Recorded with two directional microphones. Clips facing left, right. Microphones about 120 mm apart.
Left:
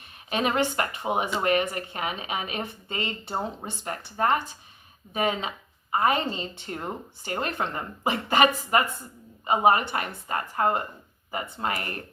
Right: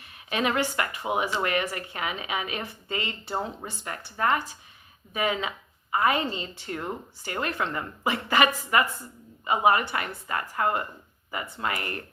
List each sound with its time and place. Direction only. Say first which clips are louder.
0.3 s a woman's voice: left 1 dB; 25° left (ahead or behind)
1.2 s a woman's voice: left 4 dB; 25° left (ahead or behind)